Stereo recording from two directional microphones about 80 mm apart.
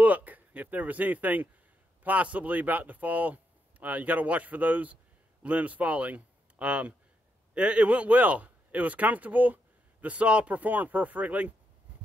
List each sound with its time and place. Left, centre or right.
0.0 s speech: centre